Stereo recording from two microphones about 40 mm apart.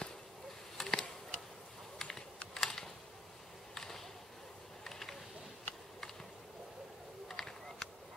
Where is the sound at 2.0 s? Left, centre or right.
Centre.